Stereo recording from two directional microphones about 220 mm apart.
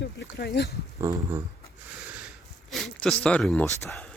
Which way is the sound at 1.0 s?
15° right (ahead or behind).